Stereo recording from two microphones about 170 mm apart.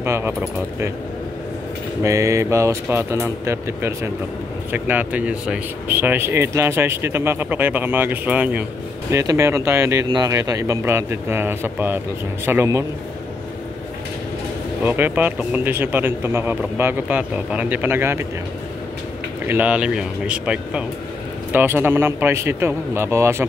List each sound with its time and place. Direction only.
0.0 s speech: 15° right (ahead or behind)
2.0 s speech: 15° right (ahead or behind)
14.8 s speech: 10° right (ahead or behind)
19.4 s speech: 10° right (ahead or behind)